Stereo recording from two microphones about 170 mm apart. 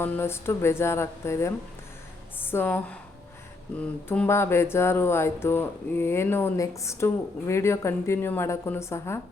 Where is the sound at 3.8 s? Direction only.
10° left (ahead or behind).